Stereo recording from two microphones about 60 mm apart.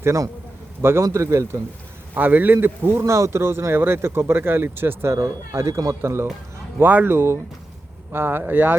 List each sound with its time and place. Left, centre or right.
0.0 s a man's voice: right
0.8 s speech: right
2.1 s speech: right
3.0 s speech: right
5.1 s speech: right
5.5 s speech: right
6.0 s speech: right
6.8 s speech: right